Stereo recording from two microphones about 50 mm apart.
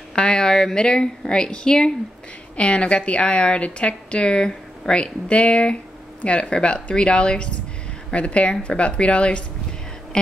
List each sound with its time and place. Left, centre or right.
0.1 s a woman's voice: centre